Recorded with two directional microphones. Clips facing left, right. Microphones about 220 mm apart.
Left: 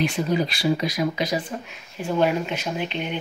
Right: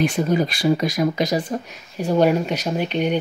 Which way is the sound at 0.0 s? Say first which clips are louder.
Right 3 dB; 50° right (ahead or behind).